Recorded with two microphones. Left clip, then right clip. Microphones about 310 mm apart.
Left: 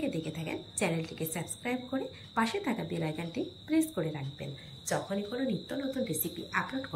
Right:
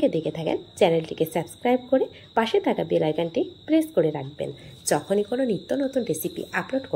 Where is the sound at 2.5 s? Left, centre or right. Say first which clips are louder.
Right 13 dB; right.